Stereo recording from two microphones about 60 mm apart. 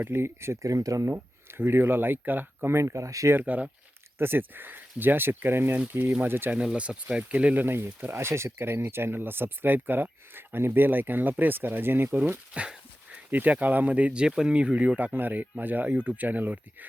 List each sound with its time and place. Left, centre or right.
0.0 s speech: right
1.1 s speech: right
2.7 s speech: right
3.4 s speech: right
4.2 s speech: right
6.5 s speech: centre; by 7.9 s right
8.1 s speech: right
12.5 s a sound: centre
13.3 s speech: right